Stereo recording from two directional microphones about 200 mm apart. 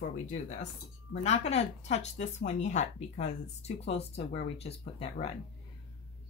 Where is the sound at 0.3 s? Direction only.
35° left (ahead or behind).